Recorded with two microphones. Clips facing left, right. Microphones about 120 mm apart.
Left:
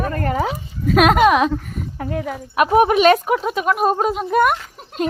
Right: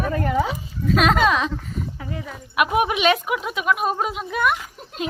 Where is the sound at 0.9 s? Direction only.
55° left (ahead or behind).